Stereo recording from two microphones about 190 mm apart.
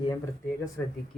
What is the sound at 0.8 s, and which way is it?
Speech, 10° left (ahead or behind).